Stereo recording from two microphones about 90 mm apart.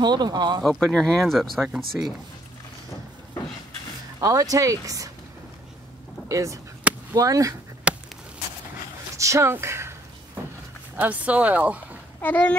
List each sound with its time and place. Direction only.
0.0 s speech: 50° right (ahead or behind)
0.7 s speech: 5° left (ahead or behind)
4.2 s speech: 40° right (ahead or behind)
6.2 s speech: 35° right (ahead or behind)
6.8 s a sound: 15° right (ahead or behind)
7.2 s speech: 40° right (ahead or behind)
7.9 s a sound: 10° right (ahead or behind)
9.1 s speech: 35° right (ahead or behind)
11.0 s speech: 15° right (ahead or behind)
12.2 s speech: 20° left (ahead or behind)